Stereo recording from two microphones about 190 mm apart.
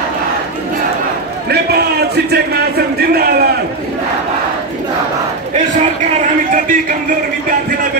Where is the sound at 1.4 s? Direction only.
60° right (ahead or behind).